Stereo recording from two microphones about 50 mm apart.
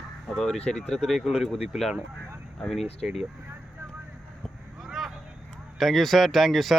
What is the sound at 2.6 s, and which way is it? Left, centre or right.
Speech, centre.